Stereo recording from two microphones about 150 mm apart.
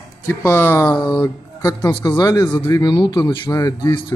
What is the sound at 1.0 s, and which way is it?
Speech, 30° left (ahead or behind).